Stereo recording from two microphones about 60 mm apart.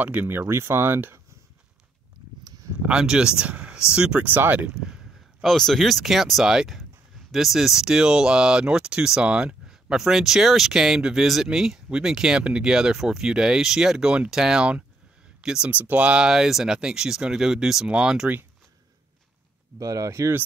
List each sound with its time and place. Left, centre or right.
0.0 s speech: right
0.3 s speech: right
2.8 s speech: centre
4.2 s speech: right
5.4 s speech: centre
15.7 s speech: right
16.3 s speech: centre
19.8 s speech: right